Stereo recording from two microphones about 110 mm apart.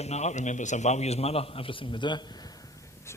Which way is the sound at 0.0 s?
90° left.